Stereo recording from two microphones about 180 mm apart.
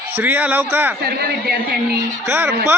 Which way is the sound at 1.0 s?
60° right (ahead or behind).